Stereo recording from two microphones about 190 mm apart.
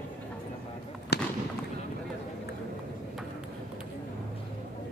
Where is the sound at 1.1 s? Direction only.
60° left (ahead or behind).